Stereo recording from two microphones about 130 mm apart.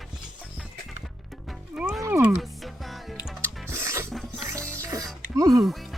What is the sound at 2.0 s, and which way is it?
Music, 20° right (ahead or behind).